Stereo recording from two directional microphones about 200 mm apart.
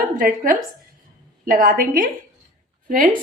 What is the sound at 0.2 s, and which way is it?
A woman's voice, 45° right (ahead or behind).